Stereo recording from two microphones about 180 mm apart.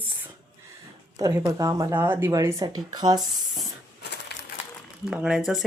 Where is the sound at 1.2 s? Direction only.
15° right (ahead or behind).